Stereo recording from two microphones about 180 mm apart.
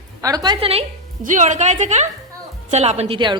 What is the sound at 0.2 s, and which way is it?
Speech, 20° right (ahead or behind).